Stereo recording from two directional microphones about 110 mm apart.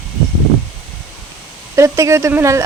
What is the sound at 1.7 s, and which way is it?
Speech, 25° right (ahead or behind).